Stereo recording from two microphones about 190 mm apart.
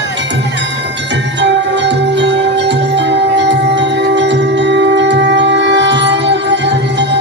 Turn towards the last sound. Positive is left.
turn(degrees=-65)  # may be behind; listen again after turning